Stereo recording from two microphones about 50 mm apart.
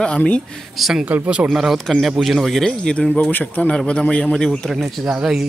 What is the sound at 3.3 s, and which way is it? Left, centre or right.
Speech, left.